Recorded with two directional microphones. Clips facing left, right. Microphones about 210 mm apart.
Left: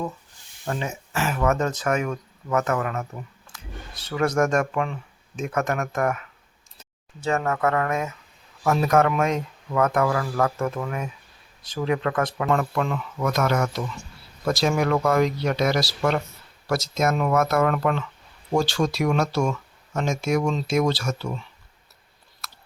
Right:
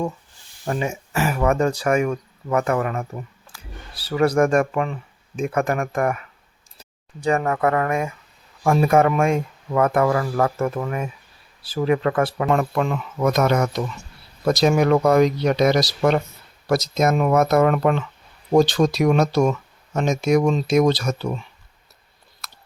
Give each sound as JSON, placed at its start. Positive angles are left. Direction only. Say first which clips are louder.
{"t": 0.6, "sound": "speech", "louder": "right 4 dB", "side_deg": -15}
{"t": 12.5, "sound": "speech", "louder": "right 3 dB", "side_deg": -20}
{"t": 22.4, "sound": "chewing", "louder": "even", "side_deg": -20}